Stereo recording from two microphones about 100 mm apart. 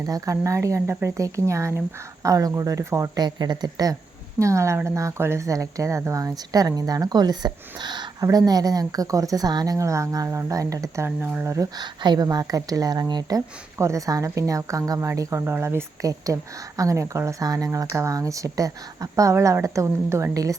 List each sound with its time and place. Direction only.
0.0 s speech: 35° right (ahead or behind)
3.2 s speech: 45° right (ahead or behind)
4.4 s speech: 30° right (ahead or behind)
11.4 s speech: 30° right (ahead or behind)
11.8 s speech: 45° right (ahead or behind)
13.7 s speech: 30° right (ahead or behind)